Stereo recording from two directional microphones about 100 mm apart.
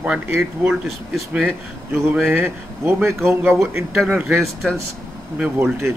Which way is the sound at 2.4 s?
25° right (ahead or behind).